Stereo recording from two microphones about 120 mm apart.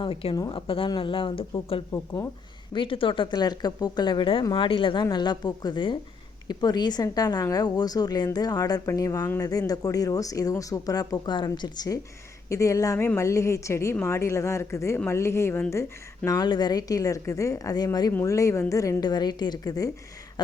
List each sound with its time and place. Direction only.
0.0 s speech: 50° left (ahead or behind)
0.3 s speech: 35° left (ahead or behind)
0.9 s speech: 45° left (ahead or behind)
1.9 s a woman's voice: 30° left (ahead or behind)
2.7 s speech: 45° left (ahead or behind)
12.5 s a woman's voice: 25° left (ahead or behind)
18.1 s a woman's voice: 25° left (ahead or behind)